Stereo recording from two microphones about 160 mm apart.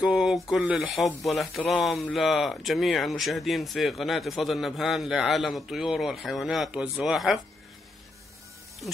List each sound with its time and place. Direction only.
0.0 s speech: centre (ahead or behind)